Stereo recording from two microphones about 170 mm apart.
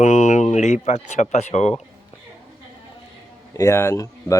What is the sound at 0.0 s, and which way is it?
Speech, 45° left (ahead or behind).